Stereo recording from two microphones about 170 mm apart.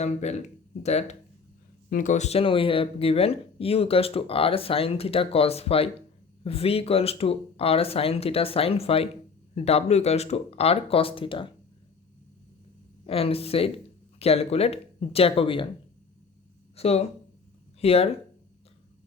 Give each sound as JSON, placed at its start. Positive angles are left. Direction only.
{"t": 0.0, "sound": "speech", "side_deg": 40}
{"t": 13.1, "sound": "speech", "side_deg": 35}
{"t": 16.7, "sound": "speech", "side_deg": 35}